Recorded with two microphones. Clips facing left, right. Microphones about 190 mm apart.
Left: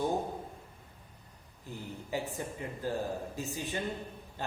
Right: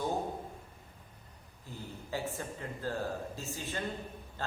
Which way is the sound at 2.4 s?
15° left (ahead or behind).